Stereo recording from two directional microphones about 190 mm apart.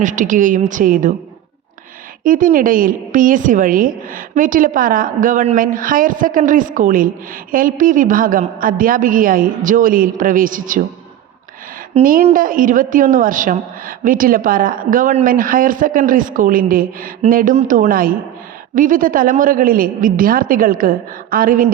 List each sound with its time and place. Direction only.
0.0 s a woman's voice: 40° right (ahead or behind)
2.2 s a woman's voice: 45° right (ahead or behind)
12.2 s a woman's voice: 45° right (ahead or behind)